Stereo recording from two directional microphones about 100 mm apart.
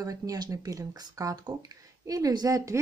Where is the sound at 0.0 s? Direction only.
35° right (ahead or behind).